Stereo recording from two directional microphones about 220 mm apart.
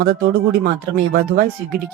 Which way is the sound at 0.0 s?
40° right (ahead or behind).